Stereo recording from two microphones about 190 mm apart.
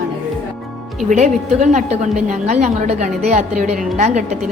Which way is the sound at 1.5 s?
40° right (ahead or behind).